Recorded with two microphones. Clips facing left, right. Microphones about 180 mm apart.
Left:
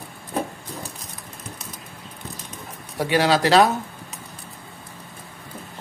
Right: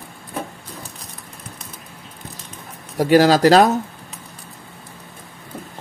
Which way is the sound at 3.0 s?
40° right (ahead or behind).